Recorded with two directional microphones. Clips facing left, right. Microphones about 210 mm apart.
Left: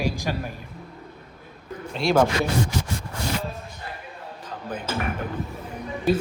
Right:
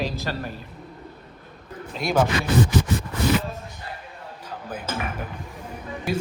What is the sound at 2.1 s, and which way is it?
Speech, 5° right (ahead or behind).